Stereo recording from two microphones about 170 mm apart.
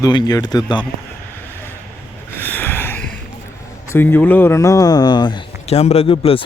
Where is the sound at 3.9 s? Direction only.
10° left (ahead or behind).